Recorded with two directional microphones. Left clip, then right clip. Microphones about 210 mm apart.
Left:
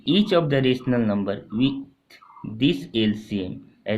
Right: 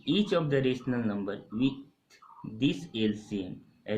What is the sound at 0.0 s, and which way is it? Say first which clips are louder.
Speech: left 8 dB; 45° left (ahead or behind).